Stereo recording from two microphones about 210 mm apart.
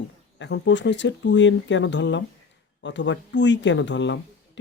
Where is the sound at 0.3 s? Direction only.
60° left (ahead or behind).